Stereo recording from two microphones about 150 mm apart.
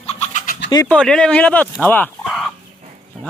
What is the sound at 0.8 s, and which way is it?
Speech, 5° left (ahead or behind).